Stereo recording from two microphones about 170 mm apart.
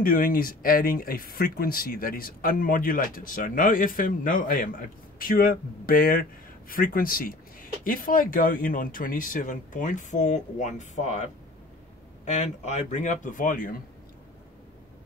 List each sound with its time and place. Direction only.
0.0 s speech: 55° left (ahead or behind)
12.3 s speech: 40° left (ahead or behind)